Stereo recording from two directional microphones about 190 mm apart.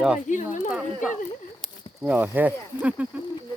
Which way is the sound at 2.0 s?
10° right (ahead or behind).